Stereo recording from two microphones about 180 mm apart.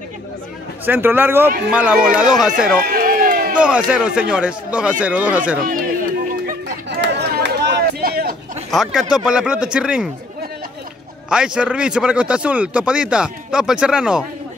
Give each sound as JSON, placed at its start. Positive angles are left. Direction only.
{"t": 0.8, "sound": "a man's voice", "side_deg": -10}
{"t": 2.8, "sound": "run", "side_deg": -55}
{"t": 3.5, "sound": "a man's voice", "side_deg": -5}
{"t": 7.0, "sound": "a sound", "side_deg": -70}
{"t": 8.6, "sound": "a man's voice", "side_deg": 0}
{"t": 11.2, "sound": "a man's voice", "side_deg": -5}